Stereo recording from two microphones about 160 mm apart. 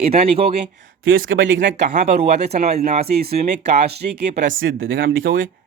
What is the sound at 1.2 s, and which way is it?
Speech, 50° right (ahead or behind).